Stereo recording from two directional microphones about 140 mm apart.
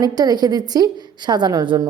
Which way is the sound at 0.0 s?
30° right (ahead or behind).